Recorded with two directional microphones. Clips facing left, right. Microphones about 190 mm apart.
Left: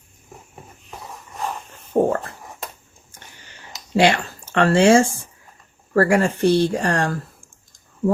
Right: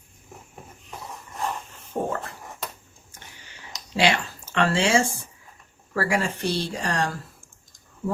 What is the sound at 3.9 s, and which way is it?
Speech, 50° left (ahead or behind).